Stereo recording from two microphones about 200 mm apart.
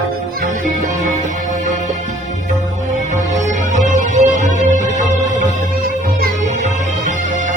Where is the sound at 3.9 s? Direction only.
35° right (ahead or behind).